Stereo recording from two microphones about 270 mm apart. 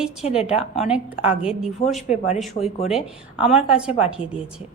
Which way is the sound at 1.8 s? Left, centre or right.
Left.